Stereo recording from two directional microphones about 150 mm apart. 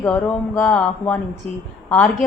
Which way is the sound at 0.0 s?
10° left (ahead or behind).